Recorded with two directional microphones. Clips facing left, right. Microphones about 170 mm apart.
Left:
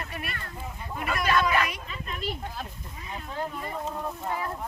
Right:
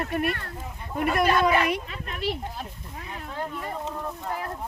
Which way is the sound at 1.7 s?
60° right (ahead or behind).